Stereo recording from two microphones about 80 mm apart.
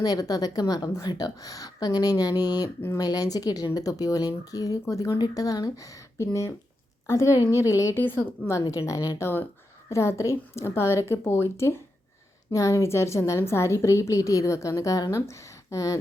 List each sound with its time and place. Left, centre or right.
0.0 s a woman's voice: left
7.9 s a woman's voice: left
8.6 s a woman's voice: left
12.5 s a woman's voice: left